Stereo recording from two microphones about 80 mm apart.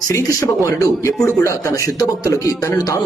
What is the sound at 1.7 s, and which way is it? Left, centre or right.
Speech, left.